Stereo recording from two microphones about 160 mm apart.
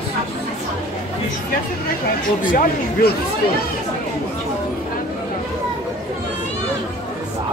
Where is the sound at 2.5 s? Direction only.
55° left (ahead or behind).